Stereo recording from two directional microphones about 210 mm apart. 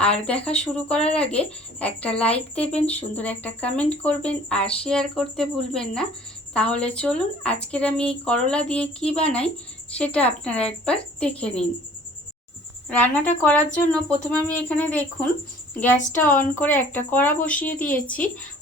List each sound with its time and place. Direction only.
0.0 s speech: 5° left (ahead or behind)
2.3 s speech: 30° left (ahead or behind)
2.8 s speech: 5° left (ahead or behind)
12.9 s speech: 5° left (ahead or behind)